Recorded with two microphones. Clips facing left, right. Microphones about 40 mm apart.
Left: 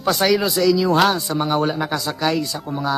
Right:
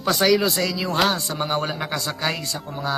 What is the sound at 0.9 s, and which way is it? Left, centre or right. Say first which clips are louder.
Speech: left 5 dB; left.